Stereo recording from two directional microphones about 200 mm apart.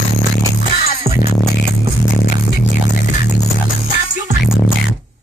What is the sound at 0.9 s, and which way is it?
Music, 35° left (ahead or behind).